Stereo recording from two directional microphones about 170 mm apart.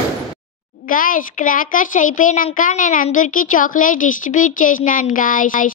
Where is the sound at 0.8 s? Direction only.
55° left (ahead or behind).